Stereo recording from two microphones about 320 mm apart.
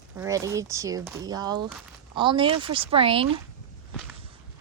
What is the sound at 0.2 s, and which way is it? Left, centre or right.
A woman's voice, centre.